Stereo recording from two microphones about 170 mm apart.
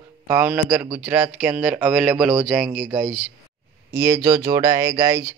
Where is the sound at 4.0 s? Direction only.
20° right (ahead or behind).